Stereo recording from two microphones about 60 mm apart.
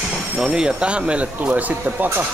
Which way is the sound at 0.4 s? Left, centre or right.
Centre.